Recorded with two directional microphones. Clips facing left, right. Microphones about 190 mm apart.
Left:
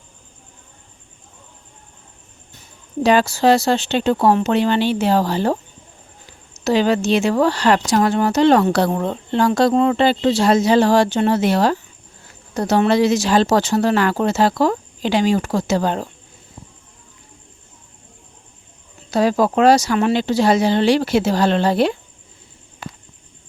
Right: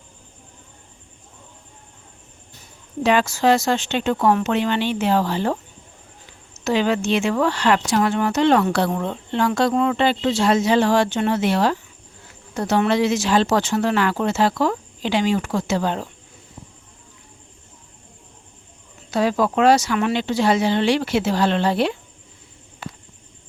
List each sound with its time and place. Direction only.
3.0 s speech: 35° left (ahead or behind)
19.1 s speech: 40° left (ahead or behind)